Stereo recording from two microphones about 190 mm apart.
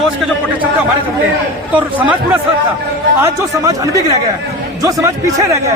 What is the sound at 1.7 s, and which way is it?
Speech, 10° right (ahead or behind).